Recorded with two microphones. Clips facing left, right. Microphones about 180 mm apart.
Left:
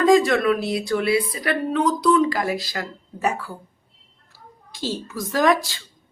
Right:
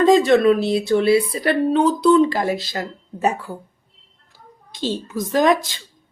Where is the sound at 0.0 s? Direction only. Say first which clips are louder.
Right 3 dB; 25° right (ahead or behind).